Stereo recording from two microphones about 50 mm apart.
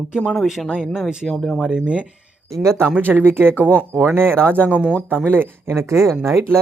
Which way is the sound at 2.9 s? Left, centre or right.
Right.